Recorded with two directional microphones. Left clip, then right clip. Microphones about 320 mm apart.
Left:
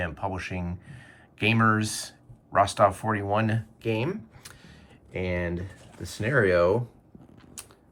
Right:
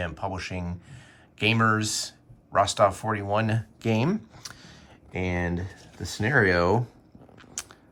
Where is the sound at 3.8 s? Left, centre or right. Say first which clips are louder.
Right 2 dB; centre.